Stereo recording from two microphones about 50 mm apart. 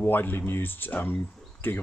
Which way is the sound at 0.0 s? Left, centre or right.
Left.